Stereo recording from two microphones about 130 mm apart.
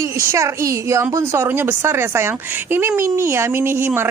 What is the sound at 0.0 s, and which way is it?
Speech, 20° right (ahead or behind).